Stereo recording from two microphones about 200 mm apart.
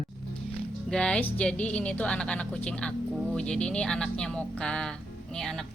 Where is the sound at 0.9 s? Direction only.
5° left (ahead or behind).